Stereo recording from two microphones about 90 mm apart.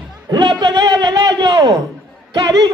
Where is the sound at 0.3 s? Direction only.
55° right (ahead or behind).